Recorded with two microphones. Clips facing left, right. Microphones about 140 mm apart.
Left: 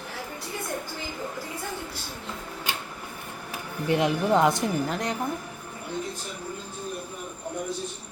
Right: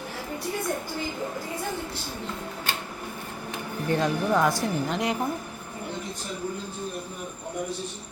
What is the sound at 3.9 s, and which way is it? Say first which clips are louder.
Speech: left 2 dB; 20° left (ahead or behind).